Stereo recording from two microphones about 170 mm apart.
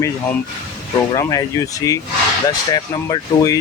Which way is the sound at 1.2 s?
20° left (ahead or behind).